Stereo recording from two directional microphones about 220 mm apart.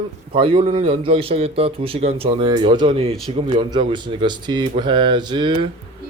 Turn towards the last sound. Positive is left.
turn(degrees=-20)  # may be behind; listen again after turning